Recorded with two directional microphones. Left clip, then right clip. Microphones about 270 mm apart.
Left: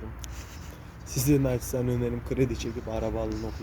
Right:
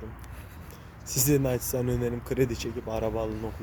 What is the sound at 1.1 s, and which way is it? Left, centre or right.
Speech, centre.